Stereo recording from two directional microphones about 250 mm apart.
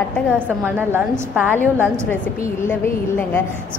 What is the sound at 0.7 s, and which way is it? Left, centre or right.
Speech, centre.